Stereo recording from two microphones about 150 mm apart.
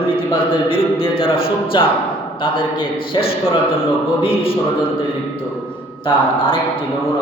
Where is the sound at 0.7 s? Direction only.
35° left (ahead or behind).